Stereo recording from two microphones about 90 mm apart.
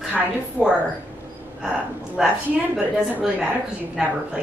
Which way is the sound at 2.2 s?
5° right (ahead or behind).